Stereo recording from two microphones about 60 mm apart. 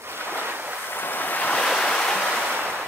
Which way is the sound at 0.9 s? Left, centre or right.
Left.